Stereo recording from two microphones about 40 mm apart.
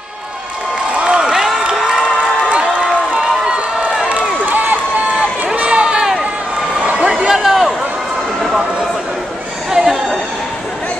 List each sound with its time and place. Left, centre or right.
0.9 s crowd: right
2.5 s run: right
4.5 s crowd: right
5.7 s run: right
6.8 s a sound: right
7.1 s a sound: centre
9.7 s chatter: centre